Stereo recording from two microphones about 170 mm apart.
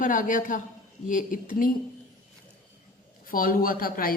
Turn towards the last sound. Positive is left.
turn(degrees=60)  # may be behind; listen again after turning